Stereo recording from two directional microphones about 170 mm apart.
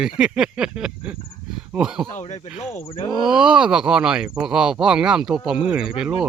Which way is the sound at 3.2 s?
5° right (ahead or behind).